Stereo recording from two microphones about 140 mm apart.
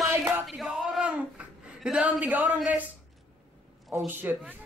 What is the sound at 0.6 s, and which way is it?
Speech, centre (ahead or behind).